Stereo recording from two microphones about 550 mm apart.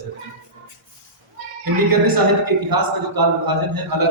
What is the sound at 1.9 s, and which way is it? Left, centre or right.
A man's voice, right.